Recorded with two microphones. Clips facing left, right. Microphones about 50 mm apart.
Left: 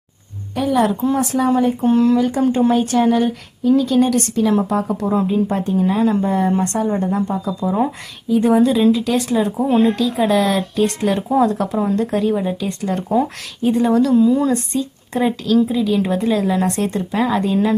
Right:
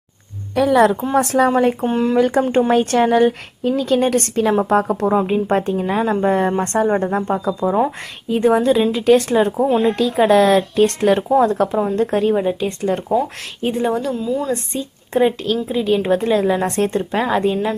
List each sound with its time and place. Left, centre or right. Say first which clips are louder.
0.5 s a woman's voice: right 4 dB; right
1.1 s a woman's voice: right 2 dB; right
1.8 s speech: left 4 dB; right
2.1 s a woman's voice: right 1 dB; right
14.1 s speech: left 7 dB; centre
14.7 s a woman's voice: even; right